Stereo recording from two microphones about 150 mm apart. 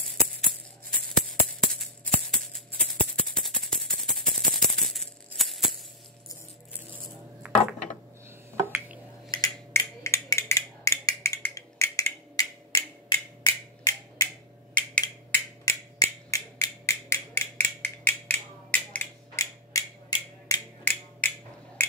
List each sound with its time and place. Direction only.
0.1 s music: 5° left (ahead or behind)
7.4 s a sound: 5° right (ahead or behind)
8.6 s drip: 10° right (ahead or behind)
9.3 s a sound: 20° left (ahead or behind)
15.0 s finger snapping: 20° left (ahead or behind)
19.3 s mechanisms: 20° left (ahead or behind)
20.8 s mechanisms: 10° left (ahead or behind)